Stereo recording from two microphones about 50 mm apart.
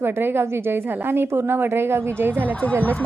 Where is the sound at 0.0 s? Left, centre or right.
Right.